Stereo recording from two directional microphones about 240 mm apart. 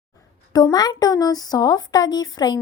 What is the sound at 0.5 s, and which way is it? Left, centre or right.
Speech, centre.